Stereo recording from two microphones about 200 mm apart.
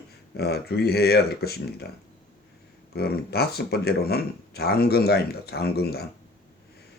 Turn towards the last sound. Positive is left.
turn(degrees=50)  # may be behind; listen again after turning